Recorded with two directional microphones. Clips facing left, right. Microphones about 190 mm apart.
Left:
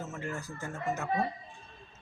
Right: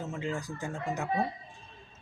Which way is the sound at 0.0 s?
15° right (ahead or behind).